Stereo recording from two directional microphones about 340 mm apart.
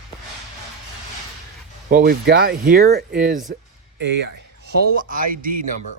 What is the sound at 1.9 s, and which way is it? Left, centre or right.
Speech, right.